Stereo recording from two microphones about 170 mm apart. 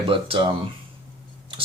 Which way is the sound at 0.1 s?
30° right (ahead or behind).